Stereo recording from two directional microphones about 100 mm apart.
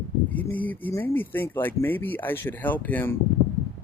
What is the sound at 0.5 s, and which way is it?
Speech, 15° left (ahead or behind).